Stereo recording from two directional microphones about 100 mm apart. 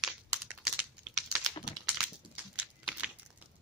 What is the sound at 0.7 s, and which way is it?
Typing, 5° right (ahead or behind).